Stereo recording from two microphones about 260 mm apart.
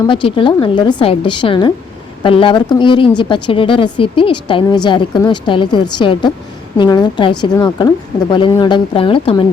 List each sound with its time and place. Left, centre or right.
0.0 s a woman's voice: centre